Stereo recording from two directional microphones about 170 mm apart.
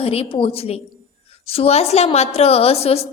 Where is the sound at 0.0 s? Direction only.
35° left (ahead or behind).